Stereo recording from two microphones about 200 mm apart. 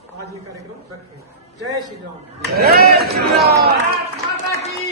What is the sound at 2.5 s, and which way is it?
A man's voice, 50° right (ahead or behind).